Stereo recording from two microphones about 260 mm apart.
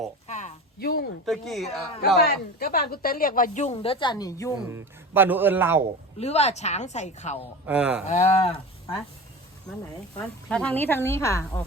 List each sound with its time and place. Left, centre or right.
0.3 s a sound: left
1.2 s a woman's voice: centre
2.0 s speech: left; by 4.5 s centre
4.7 s a man's voice: centre
6.1 s a woman's voice: left
7.7 s a woman's voice: centre
8.0 s a woman's voice: left
10.2 s speech: centre